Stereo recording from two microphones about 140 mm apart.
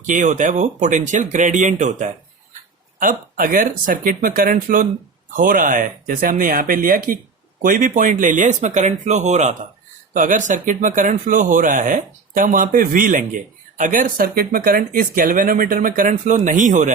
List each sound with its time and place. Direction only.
0.0 s speech: 65° right (ahead or behind)
3.0 s speech: 75° right (ahead or behind)
7.6 s speech: 75° right (ahead or behind)